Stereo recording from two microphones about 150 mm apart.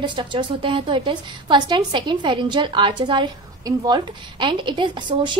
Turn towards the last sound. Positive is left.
turn(degrees=-30)  # may be behind; listen again after turning